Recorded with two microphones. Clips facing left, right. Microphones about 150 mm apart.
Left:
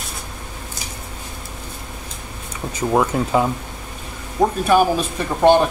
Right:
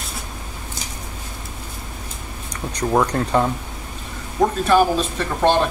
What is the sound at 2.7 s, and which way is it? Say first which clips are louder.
Speech: left 1 dB; 5° left (ahead or behind).